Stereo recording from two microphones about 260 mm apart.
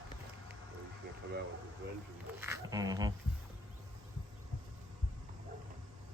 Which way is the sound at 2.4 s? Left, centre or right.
Centre.